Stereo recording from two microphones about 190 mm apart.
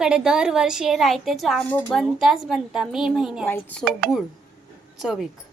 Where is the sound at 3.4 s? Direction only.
10° left (ahead or behind).